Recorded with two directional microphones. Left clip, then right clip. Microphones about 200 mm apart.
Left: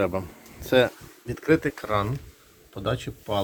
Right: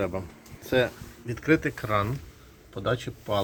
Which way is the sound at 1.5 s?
15° left (ahead or behind).